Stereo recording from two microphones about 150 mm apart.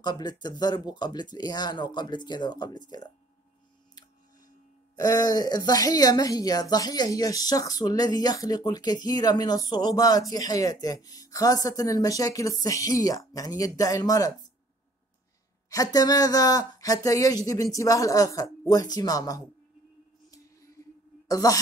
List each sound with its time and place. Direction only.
0.0 s speech: 30° left (ahead or behind)
4.9 s speech: 25° left (ahead or behind)
15.7 s speech: 25° left (ahead or behind)
20.2 s music: 20° left (ahead or behind)
21.3 s speech: 25° left (ahead or behind)